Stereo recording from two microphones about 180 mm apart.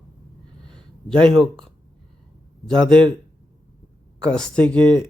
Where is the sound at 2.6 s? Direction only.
5° left (ahead or behind).